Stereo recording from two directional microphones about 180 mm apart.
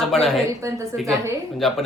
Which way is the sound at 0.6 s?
15° right (ahead or behind).